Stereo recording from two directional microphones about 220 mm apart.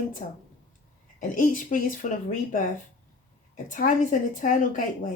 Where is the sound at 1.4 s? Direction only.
35° left (ahead or behind).